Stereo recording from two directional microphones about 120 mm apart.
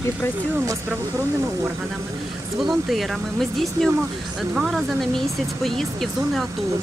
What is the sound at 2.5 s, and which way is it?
Speech, centre (ahead or behind).